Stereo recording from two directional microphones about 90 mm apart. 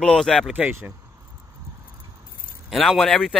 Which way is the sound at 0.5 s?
15° right (ahead or behind).